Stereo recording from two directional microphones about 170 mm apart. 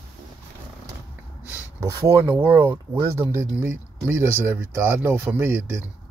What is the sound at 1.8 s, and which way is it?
Speech, 15° right (ahead or behind).